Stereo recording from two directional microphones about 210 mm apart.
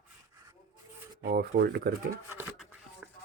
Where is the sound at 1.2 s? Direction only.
45° right (ahead or behind).